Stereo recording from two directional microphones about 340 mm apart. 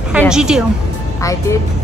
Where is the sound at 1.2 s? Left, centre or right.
Centre.